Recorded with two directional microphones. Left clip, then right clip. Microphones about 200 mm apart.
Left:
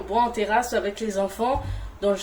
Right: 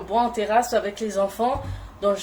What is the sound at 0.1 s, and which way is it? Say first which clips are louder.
Speech: right 1 dB; centre (ahead or behind).